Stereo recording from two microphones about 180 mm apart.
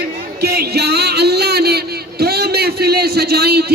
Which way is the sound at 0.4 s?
60° right (ahead or behind).